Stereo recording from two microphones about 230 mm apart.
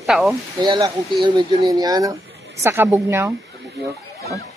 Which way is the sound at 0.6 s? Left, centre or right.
Centre.